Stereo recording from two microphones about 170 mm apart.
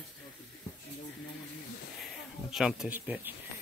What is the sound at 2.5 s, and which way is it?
Speech, 5° right (ahead or behind).